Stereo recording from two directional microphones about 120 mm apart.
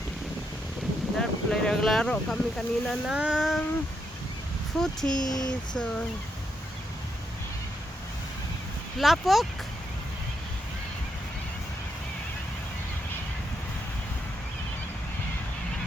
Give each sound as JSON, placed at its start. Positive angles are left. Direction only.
{"t": 1.2, "sound": "speech", "side_deg": 5}
{"t": 4.8, "sound": "speech", "side_deg": 5}
{"t": 5.2, "sound": "speech", "side_deg": 30}
{"t": 5.5, "sound": "a sound", "side_deg": 5}
{"t": 9.0, "sound": "speech", "side_deg": 0}